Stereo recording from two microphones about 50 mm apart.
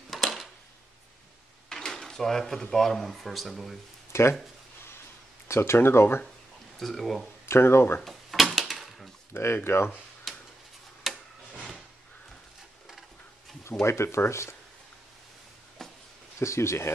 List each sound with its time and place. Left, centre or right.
0.1 s a sound: centre
1.7 s speech: centre
4.1 s speech: left
5.5 s speech: left
6.8 s speech: centre
7.4 s speech: left
8.0 s a sound: centre
9.3 s speech: left
10.3 s a sound: centre
11.1 s tick-tock: centre
13.8 s speech: left
15.8 s a sound: centre
16.3 s speech: left